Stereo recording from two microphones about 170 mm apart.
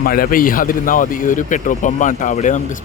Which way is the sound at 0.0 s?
60° left (ahead or behind).